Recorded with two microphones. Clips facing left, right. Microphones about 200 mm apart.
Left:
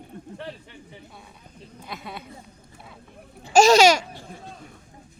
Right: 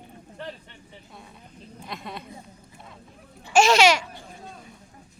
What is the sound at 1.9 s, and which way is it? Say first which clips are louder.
Speech: even; 5° left (ahead or behind).